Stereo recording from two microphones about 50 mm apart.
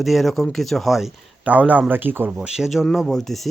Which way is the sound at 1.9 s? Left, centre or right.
Right.